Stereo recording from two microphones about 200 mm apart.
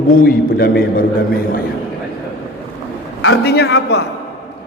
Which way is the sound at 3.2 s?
65° left (ahead or behind).